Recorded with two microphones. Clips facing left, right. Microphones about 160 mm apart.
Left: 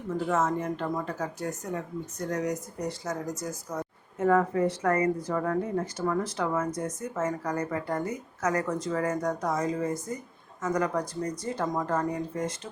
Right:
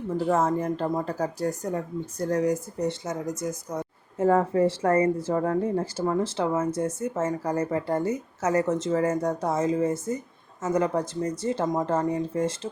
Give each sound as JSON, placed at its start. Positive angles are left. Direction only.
{"t": 0.3, "sound": "speech", "side_deg": -30}